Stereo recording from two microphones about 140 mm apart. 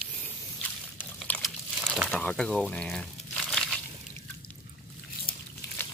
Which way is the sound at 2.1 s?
5° left (ahead or behind).